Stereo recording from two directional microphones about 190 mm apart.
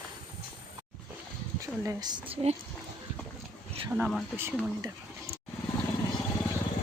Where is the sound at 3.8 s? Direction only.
5° right (ahead or behind).